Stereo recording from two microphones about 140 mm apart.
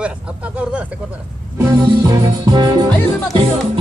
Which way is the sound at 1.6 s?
20° right (ahead or behind).